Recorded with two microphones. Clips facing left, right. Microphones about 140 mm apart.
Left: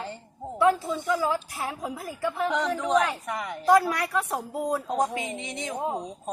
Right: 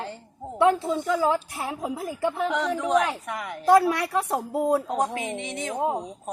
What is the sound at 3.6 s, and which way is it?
A woman's voice, 25° right (ahead or behind).